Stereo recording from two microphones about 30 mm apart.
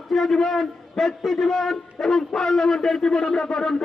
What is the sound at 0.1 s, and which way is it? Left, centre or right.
A man's voice, centre.